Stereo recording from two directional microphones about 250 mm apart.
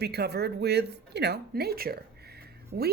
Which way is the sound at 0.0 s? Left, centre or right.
Right.